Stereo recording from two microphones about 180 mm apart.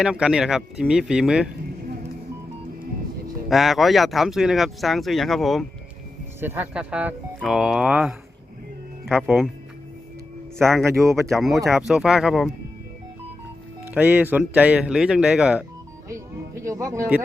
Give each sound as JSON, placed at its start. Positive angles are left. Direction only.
{"t": 0.0, "sound": "speech", "side_deg": -5}
{"t": 3.5, "sound": "speech", "side_deg": 0}
{"t": 6.4, "sound": "speech", "side_deg": -10}
{"t": 11.3, "sound": "speech", "side_deg": 0}
{"t": 13.9, "sound": "speech", "side_deg": -10}
{"t": 16.6, "sound": "speech", "side_deg": -15}